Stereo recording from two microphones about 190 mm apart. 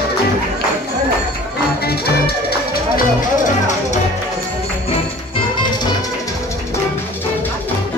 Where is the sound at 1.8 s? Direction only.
55° left (ahead or behind).